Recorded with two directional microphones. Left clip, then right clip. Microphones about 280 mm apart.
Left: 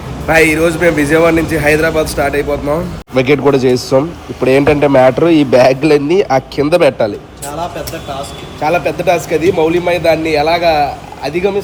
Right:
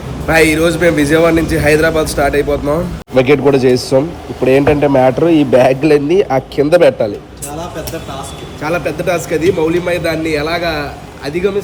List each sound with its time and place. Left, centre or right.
0.3 s a man's voice: centre
3.9 s a man's voice: left
8.6 s a man's voice: centre